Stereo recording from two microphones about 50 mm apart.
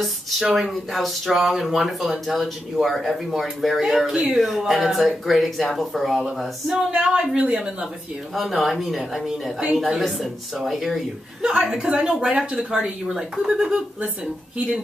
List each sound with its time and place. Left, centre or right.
0.0 s speech: centre
6.9 s speech: centre
8.4 s speech: centre
11.4 s speech: centre